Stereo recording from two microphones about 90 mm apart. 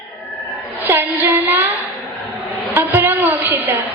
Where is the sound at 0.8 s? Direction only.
25° right (ahead or behind).